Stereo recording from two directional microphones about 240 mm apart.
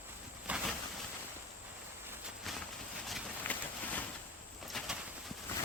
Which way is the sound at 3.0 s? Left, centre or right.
Centre.